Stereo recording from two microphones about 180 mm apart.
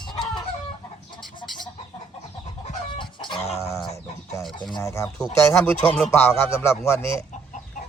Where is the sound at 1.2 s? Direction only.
25° left (ahead or behind).